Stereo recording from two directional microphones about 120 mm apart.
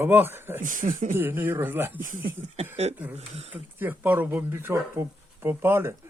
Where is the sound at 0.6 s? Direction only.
90° right.